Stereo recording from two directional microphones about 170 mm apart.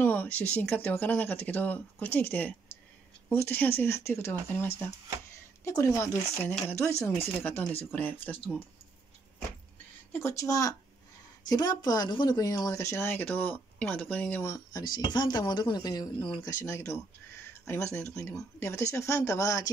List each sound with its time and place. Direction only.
0.0 s speech: 10° left (ahead or behind)
10.1 s speech: 15° left (ahead or behind)